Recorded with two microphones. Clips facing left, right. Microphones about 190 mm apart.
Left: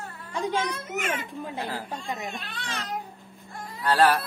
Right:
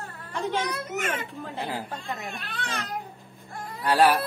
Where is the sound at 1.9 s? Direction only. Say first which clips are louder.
Left 1 dB; 15° left (ahead or behind).